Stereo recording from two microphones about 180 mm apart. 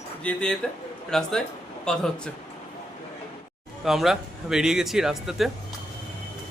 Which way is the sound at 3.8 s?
Centre (ahead or behind).